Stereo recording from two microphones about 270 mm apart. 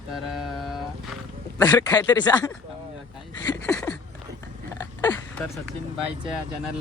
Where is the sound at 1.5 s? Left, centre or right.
Centre.